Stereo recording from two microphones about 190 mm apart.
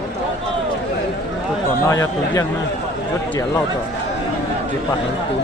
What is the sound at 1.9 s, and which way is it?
Speech, 15° left (ahead or behind).